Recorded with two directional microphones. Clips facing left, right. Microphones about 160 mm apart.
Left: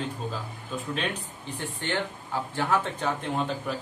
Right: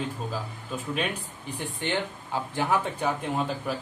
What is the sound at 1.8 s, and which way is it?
A man's voice, 15° right (ahead or behind).